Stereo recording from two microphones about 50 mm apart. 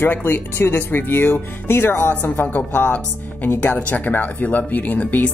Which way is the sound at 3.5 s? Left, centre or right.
Left.